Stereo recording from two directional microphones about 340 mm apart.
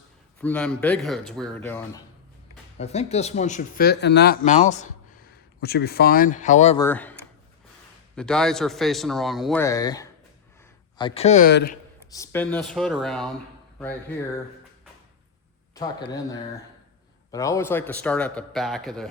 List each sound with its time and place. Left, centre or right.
0.4 s a man's voice: centre
2.7 s speech: centre
6.8 s a man's voice: centre; by 11.8 s left
12.1 s a man's voice: centre
15.7 s a man's voice: centre